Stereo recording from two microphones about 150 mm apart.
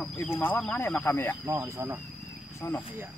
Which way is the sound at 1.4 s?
20° right (ahead or behind).